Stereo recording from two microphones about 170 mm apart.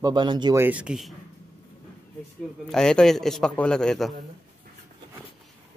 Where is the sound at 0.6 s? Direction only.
10° right (ahead or behind).